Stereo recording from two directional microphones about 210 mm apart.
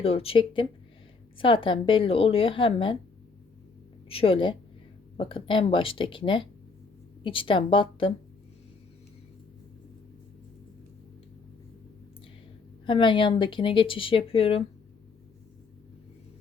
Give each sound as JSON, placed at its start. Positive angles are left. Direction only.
{"t": 0.0, "sound": "speech", "side_deg": 25}
{"t": 4.1, "sound": "speech", "side_deg": 25}
{"t": 12.8, "sound": "speech", "side_deg": 25}